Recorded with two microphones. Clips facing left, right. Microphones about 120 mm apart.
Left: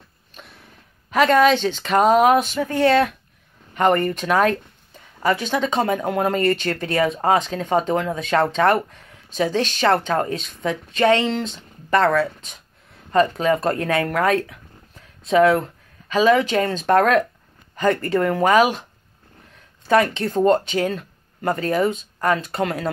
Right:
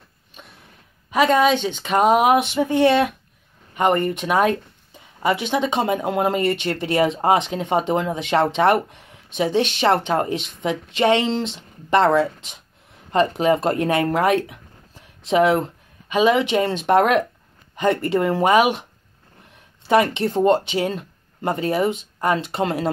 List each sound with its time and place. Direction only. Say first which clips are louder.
1.1 s speech: left 1 dB; 10° right (ahead or behind)
4.2 s speech: even; 15° right (ahead or behind)
19.9 s speech: even; 20° right (ahead or behind)